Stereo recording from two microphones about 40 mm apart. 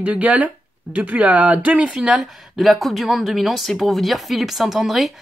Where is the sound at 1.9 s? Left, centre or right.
Centre.